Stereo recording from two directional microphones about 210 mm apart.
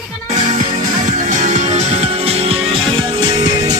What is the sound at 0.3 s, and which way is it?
Music, 35° right (ahead or behind).